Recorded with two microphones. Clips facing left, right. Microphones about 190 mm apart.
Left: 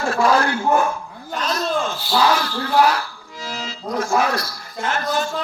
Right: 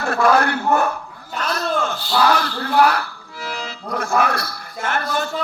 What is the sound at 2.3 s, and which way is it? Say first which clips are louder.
Speech: even; 60° right (ahead or behind).